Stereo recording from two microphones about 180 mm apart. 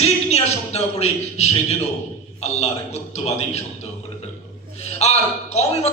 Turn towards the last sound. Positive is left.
turn(degrees=35)  # may be behind; listen again after turning